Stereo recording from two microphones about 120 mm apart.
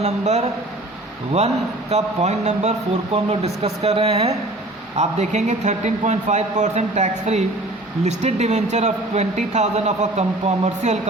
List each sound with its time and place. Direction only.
0.0 s speech: 70° right (ahead or behind)
1.9 s speech: 70° right (ahead or behind)
4.9 s speech: 70° right (ahead or behind)